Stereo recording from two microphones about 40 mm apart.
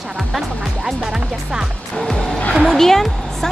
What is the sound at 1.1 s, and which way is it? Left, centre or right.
Speech, centre.